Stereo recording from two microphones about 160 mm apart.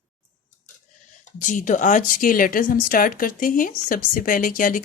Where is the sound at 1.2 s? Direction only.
50° left (ahead or behind).